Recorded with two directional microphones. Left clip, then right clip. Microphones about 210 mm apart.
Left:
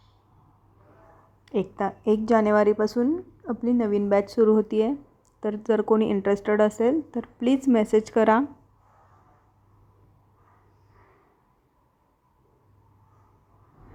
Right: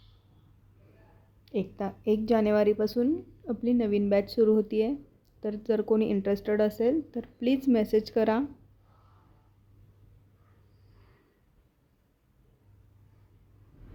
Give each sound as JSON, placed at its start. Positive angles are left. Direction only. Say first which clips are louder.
{"t": 1.5, "sound": "a woman's voice", "louder": "left 6 dB", "side_deg": 15}